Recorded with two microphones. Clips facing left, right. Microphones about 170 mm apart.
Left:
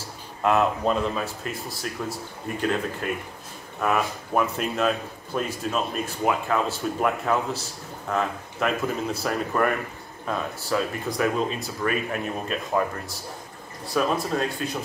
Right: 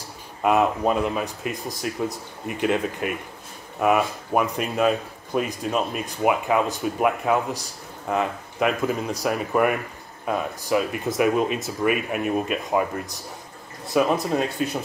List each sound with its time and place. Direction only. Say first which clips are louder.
0.4 s speech: right 2 dB; 15° right (ahead or behind)